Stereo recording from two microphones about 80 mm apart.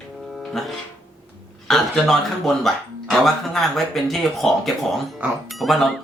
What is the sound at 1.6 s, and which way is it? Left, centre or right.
Speech, centre.